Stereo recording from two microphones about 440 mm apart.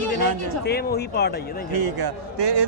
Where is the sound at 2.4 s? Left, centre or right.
Right.